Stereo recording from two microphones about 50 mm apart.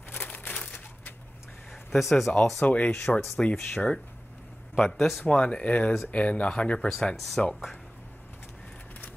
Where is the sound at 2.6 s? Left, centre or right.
Left.